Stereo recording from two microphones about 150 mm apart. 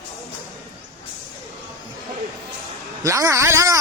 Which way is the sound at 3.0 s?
20° right (ahead or behind).